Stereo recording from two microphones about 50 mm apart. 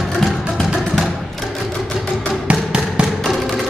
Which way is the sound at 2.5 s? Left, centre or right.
Centre.